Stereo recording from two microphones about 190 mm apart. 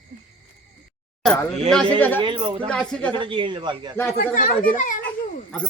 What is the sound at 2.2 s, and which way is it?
Speech, 25° right (ahead or behind).